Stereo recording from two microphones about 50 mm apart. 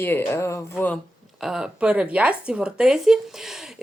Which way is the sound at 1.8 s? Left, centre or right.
Right.